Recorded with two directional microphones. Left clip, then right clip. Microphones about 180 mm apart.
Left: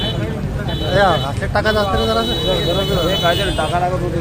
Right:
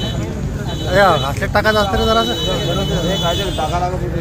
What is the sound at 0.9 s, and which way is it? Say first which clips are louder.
Speech: right 2 dB; 35° right (ahead or behind).